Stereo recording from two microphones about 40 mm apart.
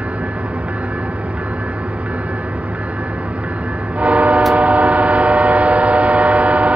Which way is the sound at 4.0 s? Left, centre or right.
Right.